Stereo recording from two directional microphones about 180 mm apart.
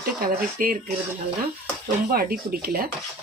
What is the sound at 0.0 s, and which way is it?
Speech, 55° right (ahead or behind).